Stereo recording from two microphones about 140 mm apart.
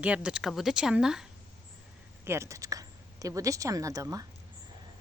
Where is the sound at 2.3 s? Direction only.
20° right (ahead or behind).